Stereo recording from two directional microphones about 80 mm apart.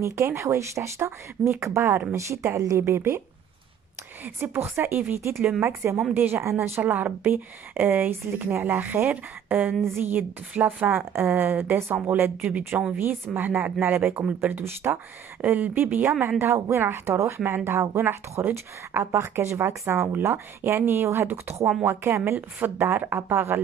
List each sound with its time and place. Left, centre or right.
0.0 s speech: right
2.8 s speech: right
4.2 s speech: right
14.6 s speech: right
15.4 s speech: centre